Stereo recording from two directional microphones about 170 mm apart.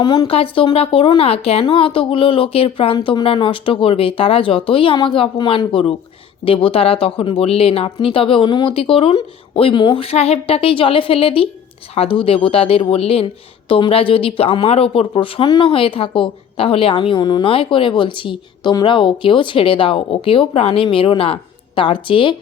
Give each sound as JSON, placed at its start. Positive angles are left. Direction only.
{"t": 0.0, "sound": "speech", "side_deg": 25}